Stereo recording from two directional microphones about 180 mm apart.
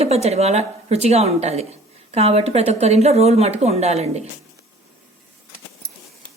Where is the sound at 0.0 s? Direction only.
35° right (ahead or behind).